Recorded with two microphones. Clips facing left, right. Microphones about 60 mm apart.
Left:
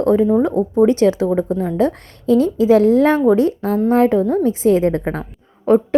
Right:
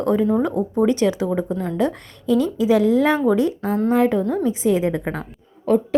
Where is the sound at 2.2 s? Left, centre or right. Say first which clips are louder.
Left 4 dB; left.